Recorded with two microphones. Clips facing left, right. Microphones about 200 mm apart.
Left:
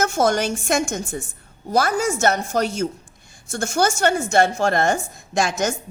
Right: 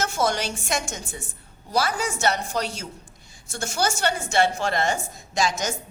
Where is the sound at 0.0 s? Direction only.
50° left (ahead or behind).